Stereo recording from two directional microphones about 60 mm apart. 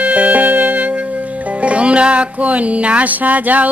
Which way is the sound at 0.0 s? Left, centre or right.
Right.